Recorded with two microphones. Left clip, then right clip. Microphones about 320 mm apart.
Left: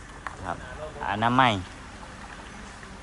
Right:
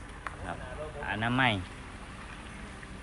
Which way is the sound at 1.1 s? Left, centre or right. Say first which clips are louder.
Left 7 dB; centre.